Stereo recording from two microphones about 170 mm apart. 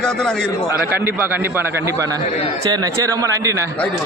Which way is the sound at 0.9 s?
15° right (ahead or behind).